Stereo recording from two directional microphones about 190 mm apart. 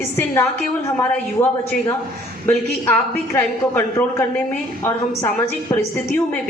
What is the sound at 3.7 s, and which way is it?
A woman's voice, 10° left (ahead or behind).